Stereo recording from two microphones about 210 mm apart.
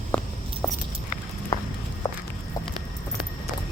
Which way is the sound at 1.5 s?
15° left (ahead or behind).